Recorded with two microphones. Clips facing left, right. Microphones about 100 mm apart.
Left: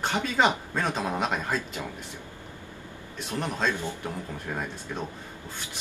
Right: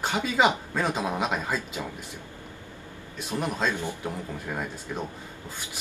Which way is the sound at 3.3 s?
15° right (ahead or behind).